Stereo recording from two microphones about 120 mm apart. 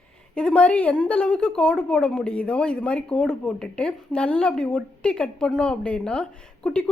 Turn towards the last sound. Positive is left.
turn(degrees=5)  # may be behind; listen again after turning